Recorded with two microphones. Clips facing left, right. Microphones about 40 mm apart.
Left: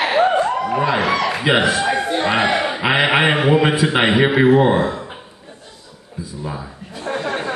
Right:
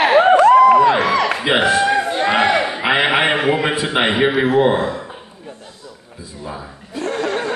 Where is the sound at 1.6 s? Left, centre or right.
Right.